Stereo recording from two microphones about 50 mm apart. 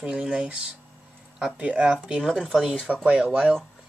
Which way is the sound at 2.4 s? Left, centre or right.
Centre.